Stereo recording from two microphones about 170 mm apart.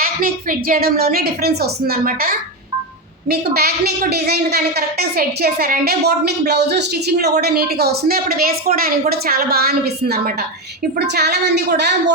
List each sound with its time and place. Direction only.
0.0 s a woman's voice: 60° right (ahead or behind); by 12.1 s 80° right